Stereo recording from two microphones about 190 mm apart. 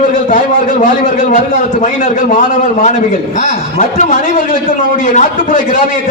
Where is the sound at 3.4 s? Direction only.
40° left (ahead or behind).